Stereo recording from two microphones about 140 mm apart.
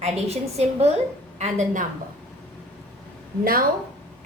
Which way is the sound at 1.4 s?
60° right (ahead or behind).